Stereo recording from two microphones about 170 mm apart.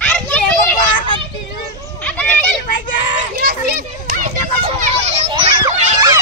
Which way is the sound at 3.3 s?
70° right (ahead or behind).